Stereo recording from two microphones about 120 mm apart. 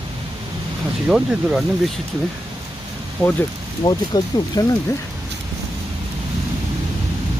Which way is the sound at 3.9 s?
35° left (ahead or behind).